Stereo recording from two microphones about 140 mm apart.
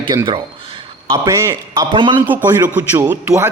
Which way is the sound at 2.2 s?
15° right (ahead or behind).